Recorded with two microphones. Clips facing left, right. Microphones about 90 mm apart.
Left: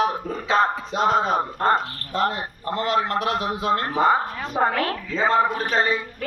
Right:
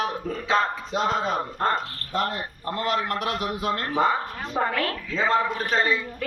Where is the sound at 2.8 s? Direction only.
25° left (ahead or behind).